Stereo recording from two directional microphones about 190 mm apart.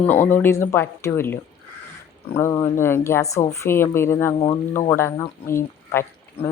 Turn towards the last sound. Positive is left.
turn(degrees=10)  # may be behind; listen again after turning